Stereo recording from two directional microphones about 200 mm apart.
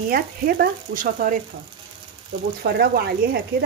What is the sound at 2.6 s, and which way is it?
Speech, 50° right (ahead or behind).